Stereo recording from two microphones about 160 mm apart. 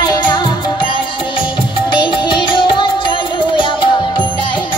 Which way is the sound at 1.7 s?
30° left (ahead or behind).